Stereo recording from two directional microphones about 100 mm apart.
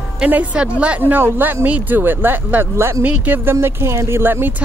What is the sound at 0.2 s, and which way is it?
Speech, 15° right (ahead or behind).